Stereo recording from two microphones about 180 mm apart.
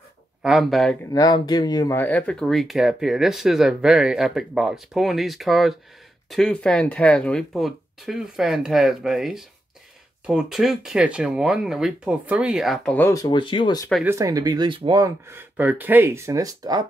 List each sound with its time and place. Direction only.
0.4 s speech: centre (ahead or behind)
1.1 s speech: 20° left (ahead or behind)
14.0 s speech: 15° right (ahead or behind)